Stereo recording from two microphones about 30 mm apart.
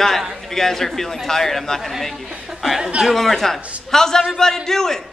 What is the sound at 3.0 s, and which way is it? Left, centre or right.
A man's voice, centre.